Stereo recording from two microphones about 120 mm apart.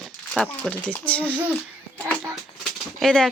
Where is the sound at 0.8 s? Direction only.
10° left (ahead or behind).